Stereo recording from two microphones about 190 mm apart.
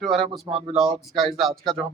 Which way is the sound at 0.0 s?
Centre (ahead or behind).